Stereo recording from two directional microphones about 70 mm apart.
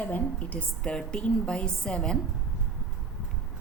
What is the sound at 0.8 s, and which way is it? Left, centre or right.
A woman's voice, centre.